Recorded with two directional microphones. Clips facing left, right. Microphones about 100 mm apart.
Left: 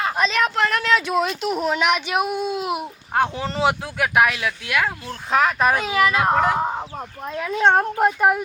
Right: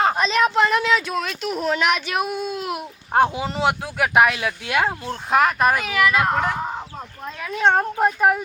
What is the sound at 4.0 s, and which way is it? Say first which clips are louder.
A child's voice: right 3 dB; 15° right (ahead or behind).